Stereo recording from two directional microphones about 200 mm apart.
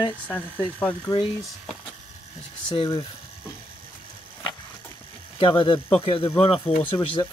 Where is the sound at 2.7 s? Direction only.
25° left (ahead or behind).